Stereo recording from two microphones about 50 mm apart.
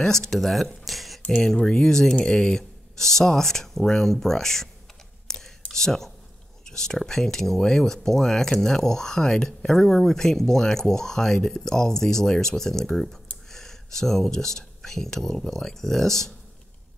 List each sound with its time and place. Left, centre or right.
0.0 s speech: centre
1.2 s speech: centre
5.7 s speech: centre